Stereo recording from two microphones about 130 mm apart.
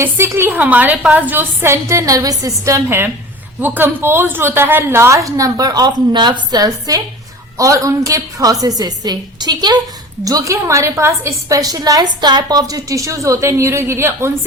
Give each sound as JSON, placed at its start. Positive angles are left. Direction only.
{"t": 0.0, "sound": "a woman's voice", "side_deg": -20}